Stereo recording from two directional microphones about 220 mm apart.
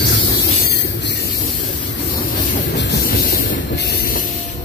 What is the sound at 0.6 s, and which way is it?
Train, 50° left (ahead or behind).